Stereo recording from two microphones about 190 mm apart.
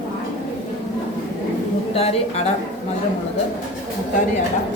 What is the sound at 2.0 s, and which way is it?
Speech, 35° left (ahead or behind).